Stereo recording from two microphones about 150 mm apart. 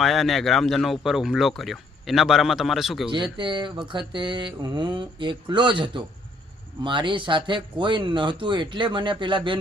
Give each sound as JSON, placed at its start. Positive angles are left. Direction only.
{"t": 0.0, "sound": "speech", "side_deg": 0}
{"t": 3.3, "sound": "mantra", "side_deg": -30}